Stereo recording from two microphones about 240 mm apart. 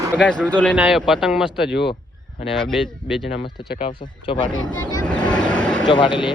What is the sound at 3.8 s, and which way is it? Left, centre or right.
Speech, left.